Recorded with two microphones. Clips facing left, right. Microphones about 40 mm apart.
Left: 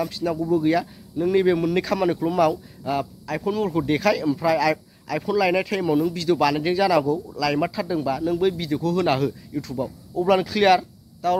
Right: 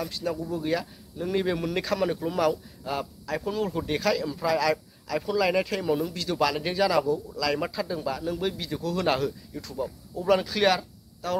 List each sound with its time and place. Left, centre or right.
0.0 s speech: centre
9.5 s speech: centre